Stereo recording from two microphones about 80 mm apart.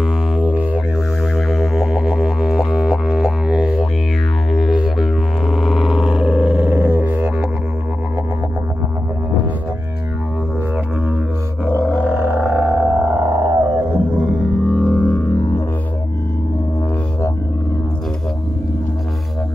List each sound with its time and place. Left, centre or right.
1.3 s music: centre
4.5 s didgeridoo: centre
6.3 s a sound: centre
6.7 s didgeridoo: right
12.0 s didgeridoo: right
12.8 s music: right
14.3 s music: centre
15.0 s music: centre